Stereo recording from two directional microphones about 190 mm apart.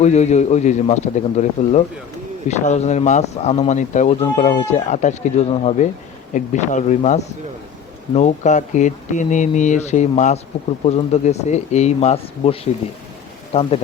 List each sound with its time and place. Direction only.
0.0 s speech: 35° left (ahead or behind)